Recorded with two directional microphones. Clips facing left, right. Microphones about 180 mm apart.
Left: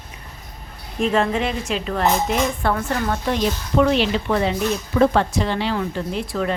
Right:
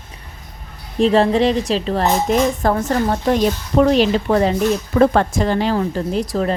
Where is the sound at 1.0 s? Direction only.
35° right (ahead or behind).